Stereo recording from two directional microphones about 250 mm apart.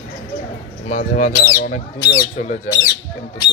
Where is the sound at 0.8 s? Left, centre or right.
Left.